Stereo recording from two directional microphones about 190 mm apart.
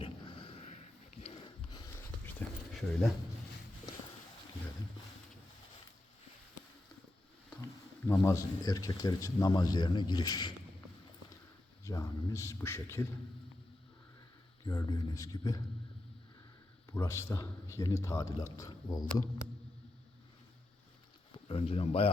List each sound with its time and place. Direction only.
0.0 s a sound: 30° left (ahead or behind)
2.4 s a sound: 10° left (ahead or behind)
2.7 s speech: centre (ahead or behind)
7.6 s speech: 10° left (ahead or behind)
11.9 s a man's voice: 15° left (ahead or behind)
14.7 s speech: 15° left (ahead or behind)
16.9 s a man's voice: 15° left (ahead or behind)
21.3 s speech: 30° left (ahead or behind)